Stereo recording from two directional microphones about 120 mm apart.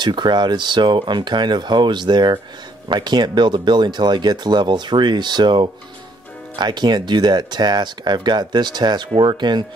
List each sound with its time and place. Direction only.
0.0 s speech: 40° right (ahead or behind)